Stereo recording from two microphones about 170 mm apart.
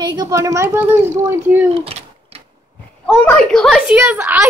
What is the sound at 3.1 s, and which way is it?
A woman's voice, 5° left (ahead or behind).